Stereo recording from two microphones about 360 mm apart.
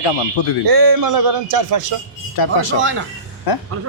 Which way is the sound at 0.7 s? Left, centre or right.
Right.